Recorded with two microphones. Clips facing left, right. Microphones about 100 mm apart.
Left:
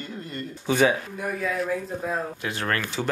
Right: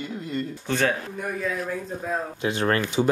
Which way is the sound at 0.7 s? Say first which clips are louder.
Left 4 dB; 10° left (ahead or behind).